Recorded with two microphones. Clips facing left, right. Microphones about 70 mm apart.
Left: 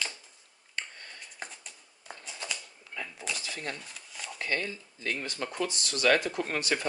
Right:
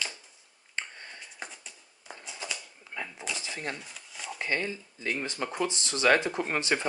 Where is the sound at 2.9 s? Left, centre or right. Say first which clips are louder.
Right 2 dB; right.